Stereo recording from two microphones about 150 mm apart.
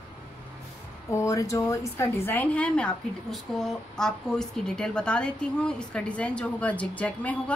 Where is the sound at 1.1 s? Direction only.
20° left (ahead or behind).